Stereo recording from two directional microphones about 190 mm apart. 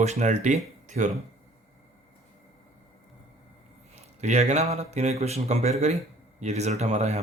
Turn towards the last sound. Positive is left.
turn(degrees=-35)  # may be behind; listen again after turning